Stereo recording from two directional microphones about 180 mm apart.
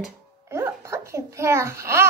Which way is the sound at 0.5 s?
15° right (ahead or behind).